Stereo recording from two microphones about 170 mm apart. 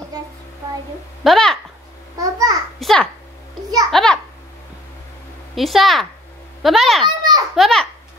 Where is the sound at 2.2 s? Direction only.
20° right (ahead or behind).